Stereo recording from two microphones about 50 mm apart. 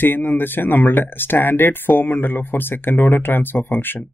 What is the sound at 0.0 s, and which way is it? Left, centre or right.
Speech, left.